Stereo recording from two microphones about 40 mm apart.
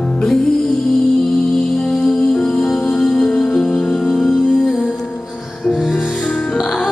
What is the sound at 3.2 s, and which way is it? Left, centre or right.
Music, left.